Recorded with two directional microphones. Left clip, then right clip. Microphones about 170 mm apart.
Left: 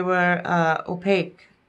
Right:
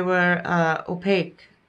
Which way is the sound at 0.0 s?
10° left (ahead or behind).